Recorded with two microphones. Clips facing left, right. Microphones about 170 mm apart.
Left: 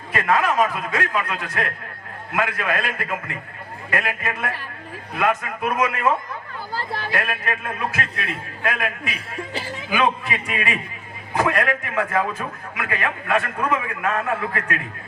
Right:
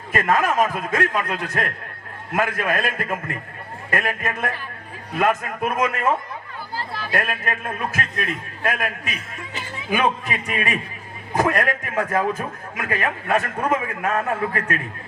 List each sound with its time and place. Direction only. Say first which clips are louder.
0.1 s a man's voice: right 1 dB; 45° right (ahead or behind)
7.1 s a man's voice: right 2 dB; 45° right (ahead or behind)
9.0 s a man's voice: left 3 dB; 30° left (ahead or behind)
9.9 s a man's voice: even; 40° right (ahead or behind)